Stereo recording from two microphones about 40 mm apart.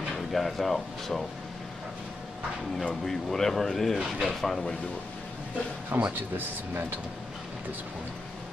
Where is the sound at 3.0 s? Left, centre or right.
Centre.